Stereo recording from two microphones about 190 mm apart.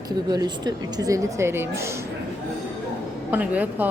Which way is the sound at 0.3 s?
20° right (ahead or behind).